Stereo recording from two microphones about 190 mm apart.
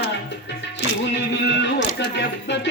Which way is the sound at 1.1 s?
65° left (ahead or behind).